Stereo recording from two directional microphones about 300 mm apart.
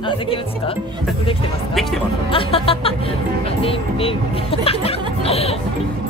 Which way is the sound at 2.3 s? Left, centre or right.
Centre.